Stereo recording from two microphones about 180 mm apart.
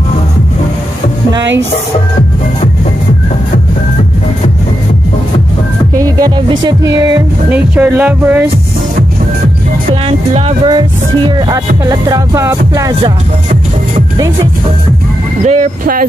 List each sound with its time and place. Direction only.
5.9 s music: 20° right (ahead or behind)
7.5 s speech: 10° right (ahead or behind)
10.0 s music: 30° right (ahead or behind)
14.1 s music: 20° right (ahead or behind)
15.4 s speech: 45° right (ahead or behind)